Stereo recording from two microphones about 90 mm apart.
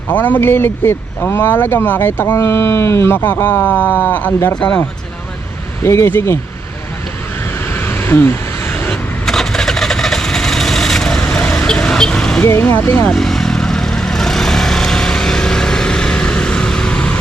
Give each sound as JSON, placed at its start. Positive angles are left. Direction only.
{"t": 0.1, "sound": "speech", "side_deg": 20}
{"t": 5.8, "sound": "speech", "side_deg": 30}
{"t": 7.6, "sound": "vehicle", "side_deg": 25}
{"t": 8.9, "sound": "vehicle", "side_deg": 5}
{"t": 12.4, "sound": "speech", "side_deg": 25}
{"t": 13.1, "sound": "vehicle", "side_deg": 5}